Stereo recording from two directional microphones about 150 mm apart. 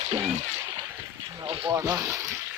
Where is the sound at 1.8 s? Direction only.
15° right (ahead or behind).